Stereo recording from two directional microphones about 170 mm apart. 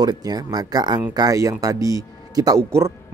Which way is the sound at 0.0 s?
25° right (ahead or behind).